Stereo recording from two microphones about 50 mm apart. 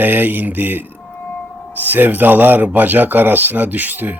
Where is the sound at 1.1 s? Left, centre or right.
Left.